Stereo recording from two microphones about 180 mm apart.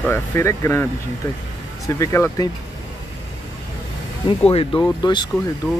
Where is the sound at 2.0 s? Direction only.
15° left (ahead or behind).